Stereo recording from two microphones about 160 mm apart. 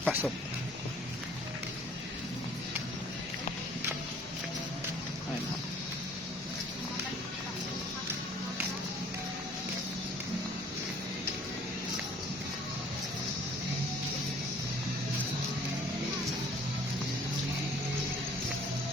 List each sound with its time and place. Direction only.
0.0 s speech: 10° right (ahead or behind)